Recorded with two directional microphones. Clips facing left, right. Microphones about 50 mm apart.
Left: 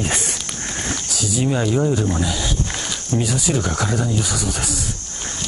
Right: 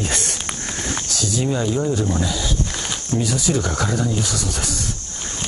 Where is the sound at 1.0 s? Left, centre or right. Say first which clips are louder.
Left 1 dB; centre.